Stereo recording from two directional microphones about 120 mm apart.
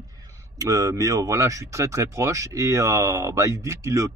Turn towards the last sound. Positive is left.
turn(degrees=-25)  # may be behind; listen again after turning